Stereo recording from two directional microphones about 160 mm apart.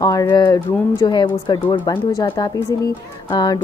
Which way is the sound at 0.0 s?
20° left (ahead or behind).